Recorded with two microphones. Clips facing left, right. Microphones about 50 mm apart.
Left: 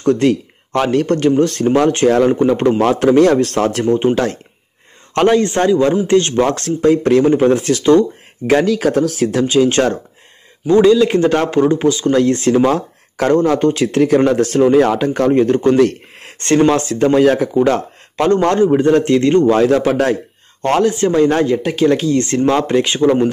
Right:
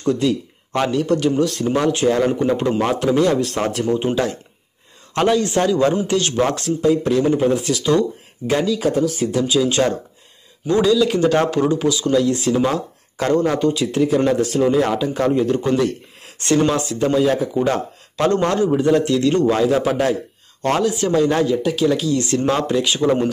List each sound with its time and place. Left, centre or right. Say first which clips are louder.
0.0 s speech: left 5 dB; left
3.8 s speech: left 4 dB; left
5.7 s speech: left 7 dB; left
6.5 s speech: left 4 dB; left
8.5 s speech: left 5 dB; left
9.4 s speech: left 4 dB; left
10.7 s speech: left 6 dB; left
16.7 s speech: left 5 dB; left
18.1 s speech: left 4 dB; left
19.6 s speech: left 4 dB; left
20.6 s speech: left 5 dB; left